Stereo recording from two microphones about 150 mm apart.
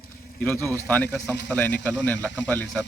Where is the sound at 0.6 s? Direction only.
20° right (ahead or behind).